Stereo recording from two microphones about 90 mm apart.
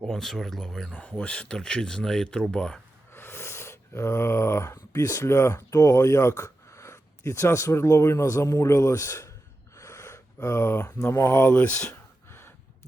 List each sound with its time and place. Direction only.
0.1 s speech: 5° left (ahead or behind)
3.1 s a sound: 25° left (ahead or behind)
9.7 s gasp: 35° left (ahead or behind)
10.8 s speech: 25° left (ahead or behind)
12.3 s gasp: 25° left (ahead or behind)